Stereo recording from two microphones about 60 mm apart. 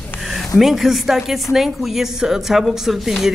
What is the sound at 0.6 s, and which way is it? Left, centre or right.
Speech, centre.